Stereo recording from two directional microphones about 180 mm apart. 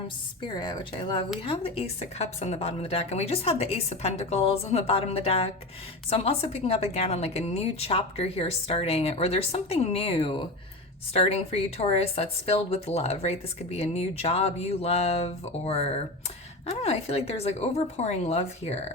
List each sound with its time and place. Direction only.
0.4 s speech: 20° left (ahead or behind)